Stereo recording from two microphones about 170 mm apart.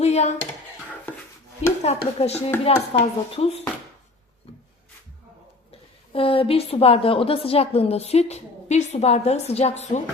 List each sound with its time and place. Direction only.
0.0 s a sound: 40° left (ahead or behind)
1.6 s a woman's voice: 40° left (ahead or behind)
6.1 s a woman's voice: 35° left (ahead or behind)